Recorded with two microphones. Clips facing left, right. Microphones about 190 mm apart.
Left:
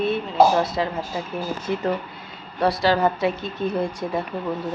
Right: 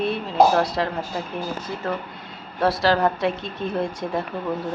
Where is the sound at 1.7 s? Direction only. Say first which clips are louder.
Left 6 dB; 20° left (ahead or behind).